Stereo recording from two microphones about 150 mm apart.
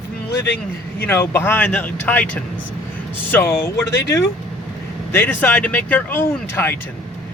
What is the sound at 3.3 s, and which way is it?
Speech, 15° left (ahead or behind).